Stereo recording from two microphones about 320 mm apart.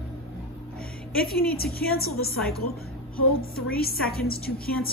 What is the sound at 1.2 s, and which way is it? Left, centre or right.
A woman's voice, left.